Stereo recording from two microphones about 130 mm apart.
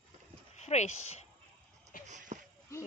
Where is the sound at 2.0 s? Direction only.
70° right (ahead or behind).